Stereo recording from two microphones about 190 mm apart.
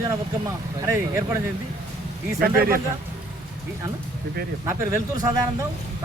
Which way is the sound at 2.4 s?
50° right (ahead or behind).